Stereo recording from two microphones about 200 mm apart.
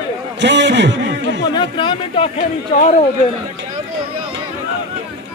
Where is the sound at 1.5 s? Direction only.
25° left (ahead or behind).